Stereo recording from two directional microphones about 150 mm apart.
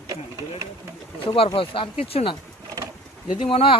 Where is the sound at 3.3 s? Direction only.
35° left (ahead or behind).